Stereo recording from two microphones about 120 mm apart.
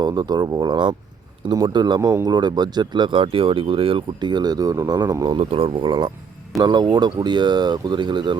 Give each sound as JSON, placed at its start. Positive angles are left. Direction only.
{"t": 0.0, "sound": "speech", "side_deg": -35}
{"t": 2.0, "sound": "speech", "side_deg": -25}
{"t": 5.4, "sound": "speech", "side_deg": -55}